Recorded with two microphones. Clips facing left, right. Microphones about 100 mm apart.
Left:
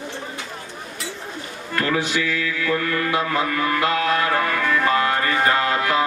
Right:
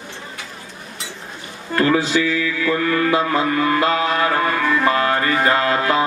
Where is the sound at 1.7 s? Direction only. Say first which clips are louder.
Right 5 dB; 30° right (ahead or behind).